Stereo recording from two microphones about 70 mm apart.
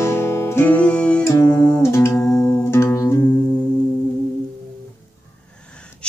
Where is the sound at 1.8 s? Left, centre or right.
Left.